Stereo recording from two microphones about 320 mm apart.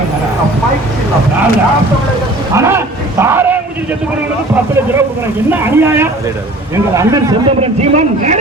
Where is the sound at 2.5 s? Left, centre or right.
Centre.